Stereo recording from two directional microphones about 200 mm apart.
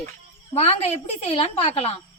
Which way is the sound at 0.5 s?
30° left (ahead or behind).